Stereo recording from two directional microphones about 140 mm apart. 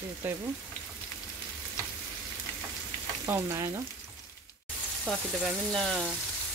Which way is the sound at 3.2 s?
20° right (ahead or behind).